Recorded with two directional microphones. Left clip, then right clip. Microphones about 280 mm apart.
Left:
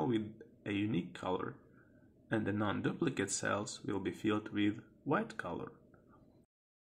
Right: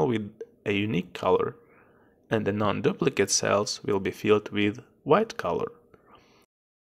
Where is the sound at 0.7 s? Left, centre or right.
Right.